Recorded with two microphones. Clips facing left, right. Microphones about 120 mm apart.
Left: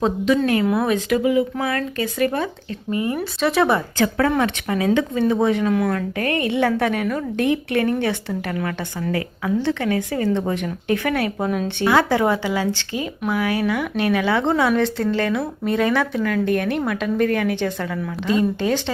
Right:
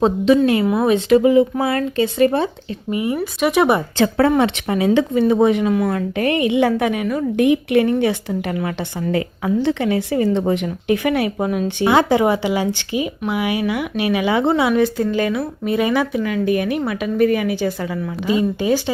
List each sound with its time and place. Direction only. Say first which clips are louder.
0.3 s speech: right 3 dB; 15° right (ahead or behind)